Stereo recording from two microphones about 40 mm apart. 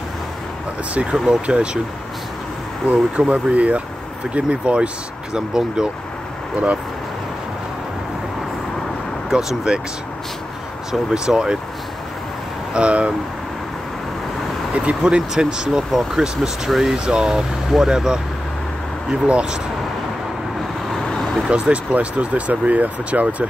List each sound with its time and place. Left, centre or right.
1.1 s speech: centre
1.5 s speech: right
3.2 s speech: right
5.3 s speech: centre
6.5 s speech: right
9.3 s speech: centre
10.9 s speech: centre
12.7 s speech: right
14.7 s vehicle: right
15.0 s speech: right
19.2 s speech: right
21.5 s speech: right
21.9 s speech: right